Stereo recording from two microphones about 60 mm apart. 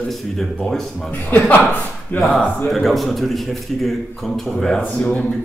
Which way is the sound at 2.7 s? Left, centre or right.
Centre.